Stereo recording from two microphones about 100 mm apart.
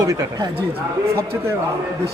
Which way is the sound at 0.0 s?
40° right (ahead or behind).